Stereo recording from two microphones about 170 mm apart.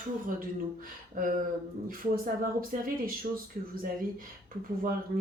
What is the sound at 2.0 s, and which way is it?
Speech, 55° right (ahead or behind).